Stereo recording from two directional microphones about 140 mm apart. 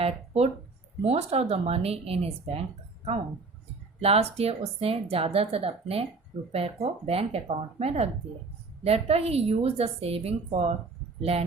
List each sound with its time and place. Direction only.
0.0 s speech: 45° right (ahead or behind)